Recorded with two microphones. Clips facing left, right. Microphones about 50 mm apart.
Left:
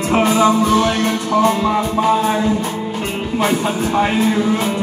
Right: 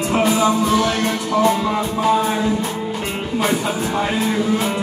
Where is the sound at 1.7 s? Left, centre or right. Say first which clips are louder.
Left 2 dB; left.